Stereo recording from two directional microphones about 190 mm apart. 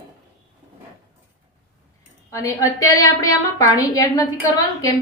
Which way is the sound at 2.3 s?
15° left (ahead or behind).